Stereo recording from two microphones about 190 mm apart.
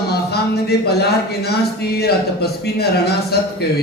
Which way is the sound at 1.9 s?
55° left (ahead or behind).